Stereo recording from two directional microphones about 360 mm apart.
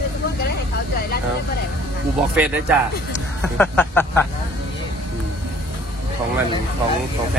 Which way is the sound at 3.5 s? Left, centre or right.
Centre.